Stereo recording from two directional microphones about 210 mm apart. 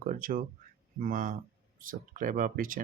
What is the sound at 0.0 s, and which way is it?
Speech, 40° right (ahead or behind).